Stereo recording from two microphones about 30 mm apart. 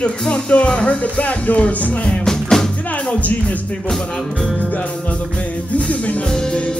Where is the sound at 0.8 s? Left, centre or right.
Left.